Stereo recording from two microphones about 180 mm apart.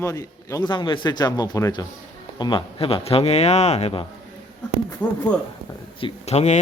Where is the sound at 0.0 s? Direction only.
15° left (ahead or behind); by 4.0 s 35° left (ahead or behind).